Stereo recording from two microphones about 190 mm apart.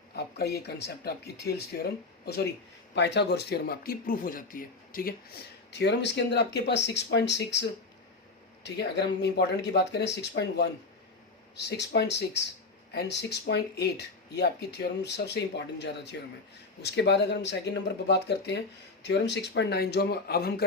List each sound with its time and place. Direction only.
0.2 s speech: 60° left (ahead or behind)
5.7 s speech: 65° left (ahead or behind)
8.6 s speech: 60° left (ahead or behind)